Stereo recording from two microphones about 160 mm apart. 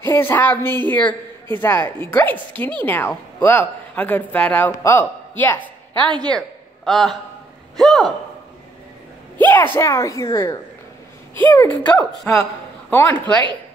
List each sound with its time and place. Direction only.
0.0 s speech: 15° left (ahead or behind)
6.0 s a man's voice: 25° right (ahead or behind)
6.3 s a sound: centre (ahead or behind)
7.8 s a man's voice: centre (ahead or behind)
9.4 s a sound: 15° left (ahead or behind)
9.8 s a woman's voice: 20° left (ahead or behind)
11.9 s a woman's voice: 20° left (ahead or behind)
13.1 s speech: 30° right (ahead or behind)